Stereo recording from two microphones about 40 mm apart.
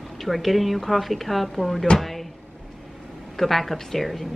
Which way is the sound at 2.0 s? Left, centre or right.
Centre.